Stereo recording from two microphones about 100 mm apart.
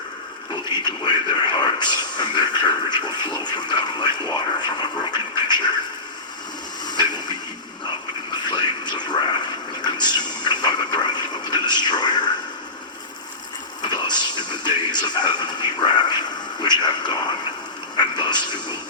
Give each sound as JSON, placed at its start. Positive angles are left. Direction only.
{"t": 0.7, "sound": "speech", "side_deg": 50}
{"t": 6.8, "sound": "a sound", "side_deg": 45}
{"t": 8.4, "sound": "speech", "side_deg": 45}
{"t": 13.8, "sound": "speech", "side_deg": 45}